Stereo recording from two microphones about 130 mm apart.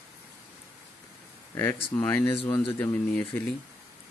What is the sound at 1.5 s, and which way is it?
Speech, 20° left (ahead or behind).